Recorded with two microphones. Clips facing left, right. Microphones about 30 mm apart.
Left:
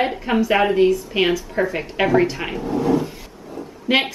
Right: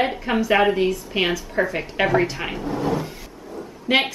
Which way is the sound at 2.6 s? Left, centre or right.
Right.